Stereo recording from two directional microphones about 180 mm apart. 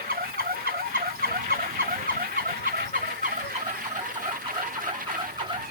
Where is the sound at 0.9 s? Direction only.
55° right (ahead or behind).